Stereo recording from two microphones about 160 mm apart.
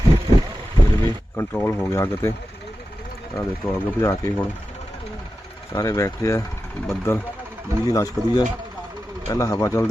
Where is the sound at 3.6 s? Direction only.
5° left (ahead or behind).